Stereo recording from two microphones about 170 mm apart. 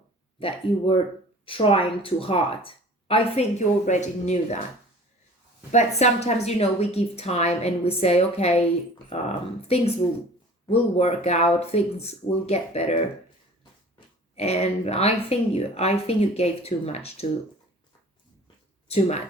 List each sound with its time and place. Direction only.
0.3 s a woman's voice: 35° left (ahead or behind)
2.6 s a sound: 35° left (ahead or behind)
3.8 s speech: 45° left (ahead or behind)
5.7 s a woman's voice: 40° left (ahead or behind)
14.3 s a woman's voice: 40° left (ahead or behind)
18.9 s a woman's voice: 40° left (ahead or behind)